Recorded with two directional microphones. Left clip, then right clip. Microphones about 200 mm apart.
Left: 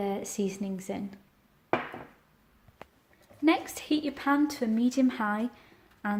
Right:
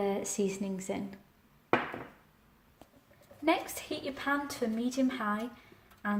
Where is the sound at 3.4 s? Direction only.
45° left (ahead or behind).